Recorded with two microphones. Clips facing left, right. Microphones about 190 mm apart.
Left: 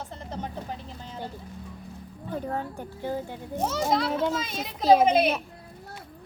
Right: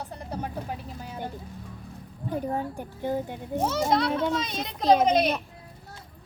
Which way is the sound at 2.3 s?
15° right (ahead or behind).